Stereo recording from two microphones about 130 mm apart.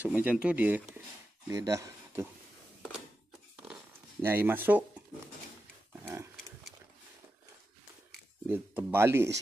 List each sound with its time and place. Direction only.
0.0 s speech: 10° right (ahead or behind)
1.5 s speech: 25° right (ahead or behind)
4.2 s speech: 15° right (ahead or behind)
8.5 s speech: 15° right (ahead or behind)